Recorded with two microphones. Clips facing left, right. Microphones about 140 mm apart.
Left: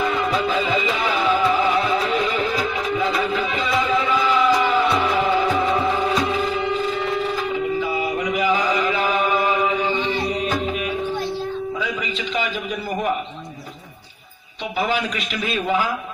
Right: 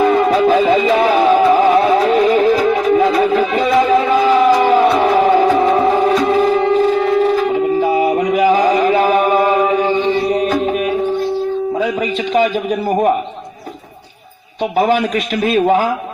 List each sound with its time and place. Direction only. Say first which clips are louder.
0.0 s music: right 10 dB; 45° right (ahead or behind)
14.8 s a man's voice: right 9 dB; 50° right (ahead or behind)